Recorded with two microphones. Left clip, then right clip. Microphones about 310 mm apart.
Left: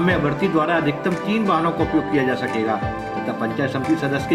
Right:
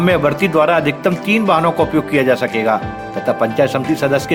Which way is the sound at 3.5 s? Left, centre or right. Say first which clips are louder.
Right 6 dB; right.